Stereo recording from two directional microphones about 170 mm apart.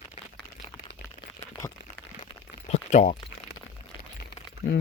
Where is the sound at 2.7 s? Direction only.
45° left (ahead or behind).